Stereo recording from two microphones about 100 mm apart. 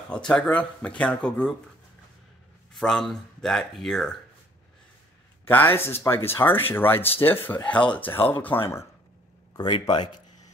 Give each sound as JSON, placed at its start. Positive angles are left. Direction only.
{"t": 0.1, "sound": "speech", "side_deg": 10}
{"t": 2.7, "sound": "speech", "side_deg": 5}
{"t": 5.4, "sound": "speech", "side_deg": 20}
{"t": 9.6, "sound": "speech", "side_deg": 50}